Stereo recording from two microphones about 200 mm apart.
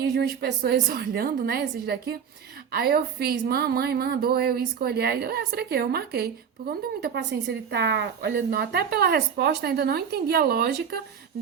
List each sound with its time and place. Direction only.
0.1 s a woman's voice: 55° right (ahead or behind)